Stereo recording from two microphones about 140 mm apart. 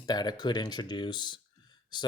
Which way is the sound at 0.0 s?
30° left (ahead or behind).